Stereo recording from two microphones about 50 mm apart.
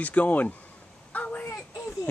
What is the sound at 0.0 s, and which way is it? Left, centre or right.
Speech, left.